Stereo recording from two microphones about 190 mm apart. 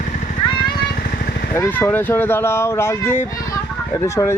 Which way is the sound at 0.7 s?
50° left (ahead or behind).